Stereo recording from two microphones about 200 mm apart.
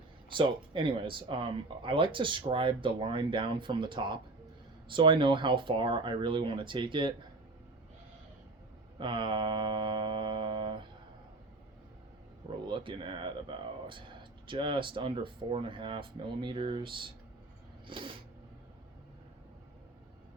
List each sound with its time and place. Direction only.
0.3 s speech: 25° right (ahead or behind)
9.0 s mantra: 25° right (ahead or behind)
12.6 s speech: 25° right (ahead or behind)